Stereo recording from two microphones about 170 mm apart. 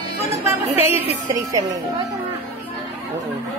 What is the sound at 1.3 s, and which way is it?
Speech, 20° right (ahead or behind).